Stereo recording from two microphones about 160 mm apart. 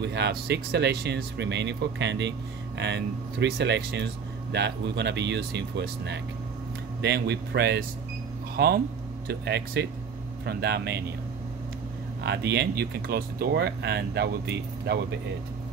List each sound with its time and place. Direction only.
0.0 s speech: 90° right
8.5 s speech: 80° right
9.3 s speech: 90° right
12.2 s speech: 90° right